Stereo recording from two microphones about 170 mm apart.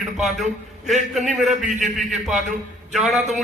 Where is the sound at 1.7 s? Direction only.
45° right (ahead or behind).